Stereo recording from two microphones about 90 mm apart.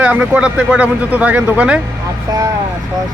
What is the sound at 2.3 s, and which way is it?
Speech, 40° right (ahead or behind).